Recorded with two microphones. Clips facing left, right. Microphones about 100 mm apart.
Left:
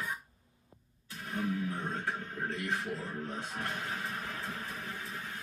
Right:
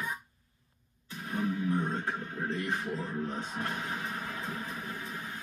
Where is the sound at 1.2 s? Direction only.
Centre (ahead or behind).